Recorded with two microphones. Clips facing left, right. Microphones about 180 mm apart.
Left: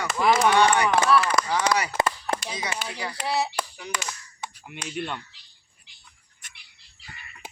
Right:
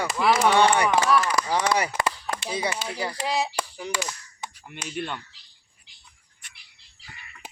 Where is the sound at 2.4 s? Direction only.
30° right (ahead or behind).